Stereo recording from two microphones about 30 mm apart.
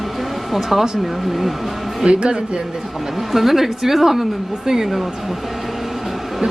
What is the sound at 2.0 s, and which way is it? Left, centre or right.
Speech, right.